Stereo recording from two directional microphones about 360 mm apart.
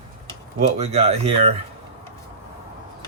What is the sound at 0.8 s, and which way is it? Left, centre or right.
Speech, centre.